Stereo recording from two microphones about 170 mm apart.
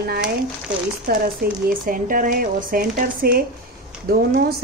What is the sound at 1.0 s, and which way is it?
Speech, 65° right (ahead or behind).